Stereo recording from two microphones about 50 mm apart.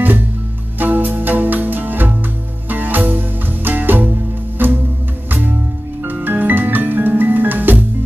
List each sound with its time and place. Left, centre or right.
0.7 s music: right
6.0 s music: right